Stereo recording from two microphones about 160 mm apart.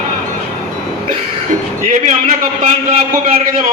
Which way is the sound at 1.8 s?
55° right (ahead or behind).